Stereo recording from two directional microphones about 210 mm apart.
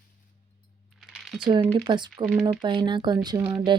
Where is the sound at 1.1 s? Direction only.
Centre (ahead or behind).